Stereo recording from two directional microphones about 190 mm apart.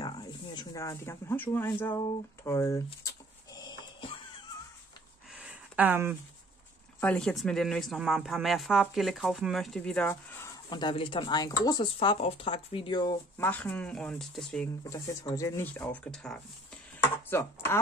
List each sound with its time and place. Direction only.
0.0 s a sound: 20° left (ahead or behind)
5.3 s a sound: 5° right (ahead or behind)
7.0 s speech: 5° left (ahead or behind)
10.7 s speech: 25° left (ahead or behind)
13.4 s speech: 10° left (ahead or behind)
14.8 s speech: 20° left (ahead or behind)